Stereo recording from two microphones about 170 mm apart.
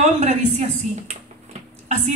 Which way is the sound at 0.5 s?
40° right (ahead or behind).